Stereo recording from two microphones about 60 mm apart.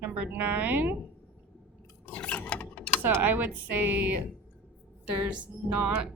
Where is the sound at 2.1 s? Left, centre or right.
Left.